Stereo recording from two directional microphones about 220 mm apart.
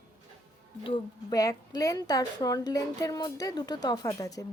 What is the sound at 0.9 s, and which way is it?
A woman's voice, 15° left (ahead or behind).